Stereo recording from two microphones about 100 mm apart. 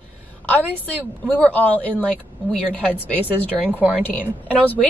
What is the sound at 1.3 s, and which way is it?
A woman's voice, 15° left (ahead or behind).